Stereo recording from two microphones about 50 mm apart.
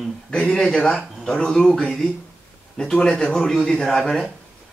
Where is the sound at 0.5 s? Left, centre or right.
Centre.